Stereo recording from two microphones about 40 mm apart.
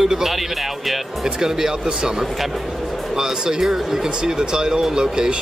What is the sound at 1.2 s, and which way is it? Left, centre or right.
Speech, centre.